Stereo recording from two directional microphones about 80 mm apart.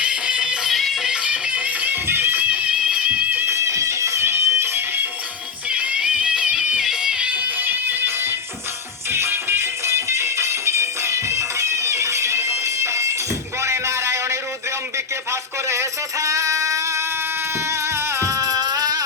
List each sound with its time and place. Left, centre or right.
0.0 s music: centre; by 2.4 s right
2.5 s music: centre
3.5 s music: right
5.6 s music: centre; by 13.1 s right
13.6 s a sound: right
14.9 s music: right